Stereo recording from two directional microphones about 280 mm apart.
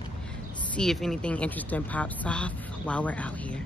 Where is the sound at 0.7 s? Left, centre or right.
Centre.